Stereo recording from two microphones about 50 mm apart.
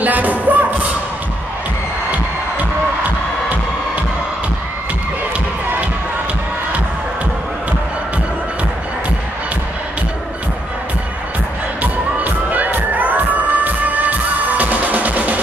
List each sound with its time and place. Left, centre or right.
0.0 s music: right
11.8 s music: right